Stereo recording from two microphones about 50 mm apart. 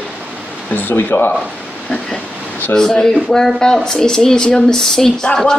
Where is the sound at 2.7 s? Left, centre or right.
Centre.